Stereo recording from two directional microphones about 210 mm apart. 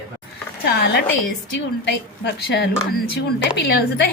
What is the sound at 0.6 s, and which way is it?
A woman's voice, 50° left (ahead or behind).